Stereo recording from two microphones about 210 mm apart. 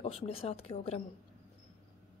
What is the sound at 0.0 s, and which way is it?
A woman's voice, 30° left (ahead or behind).